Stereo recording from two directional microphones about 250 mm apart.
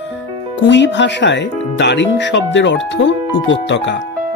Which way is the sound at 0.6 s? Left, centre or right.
Left.